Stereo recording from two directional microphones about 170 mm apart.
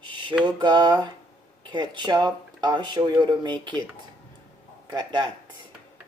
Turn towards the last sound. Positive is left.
turn(degrees=-25)  # may be behind; listen again after turning